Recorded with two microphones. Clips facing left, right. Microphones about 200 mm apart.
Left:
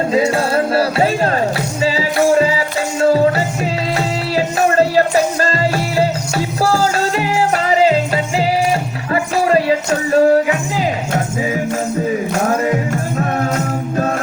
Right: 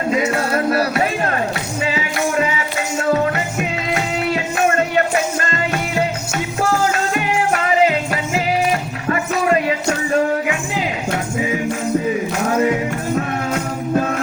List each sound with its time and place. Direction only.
0.1 s music: 30° left (ahead or behind)